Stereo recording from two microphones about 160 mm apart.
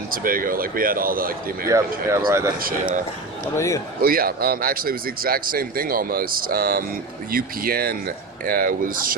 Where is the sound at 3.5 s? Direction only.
20° left (ahead or behind).